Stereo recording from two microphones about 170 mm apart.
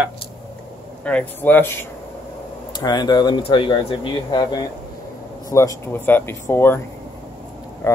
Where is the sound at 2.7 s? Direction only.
25° left (ahead or behind).